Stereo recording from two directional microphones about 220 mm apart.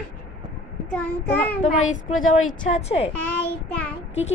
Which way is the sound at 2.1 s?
65° left (ahead or behind).